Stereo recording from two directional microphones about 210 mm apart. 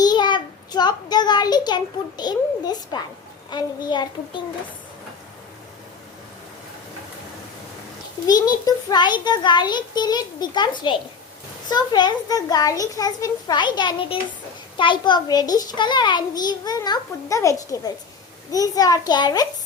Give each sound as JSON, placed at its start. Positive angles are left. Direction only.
{"t": 0.0, "sound": "a child's voice", "side_deg": 20}
{"t": 8.3, "sound": "a child's voice", "side_deg": 15}